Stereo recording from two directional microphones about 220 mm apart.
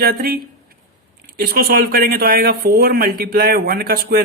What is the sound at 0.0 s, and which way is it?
Speech, 45° right (ahead or behind).